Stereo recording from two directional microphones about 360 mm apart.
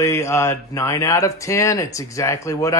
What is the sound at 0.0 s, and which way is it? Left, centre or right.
Speech, centre.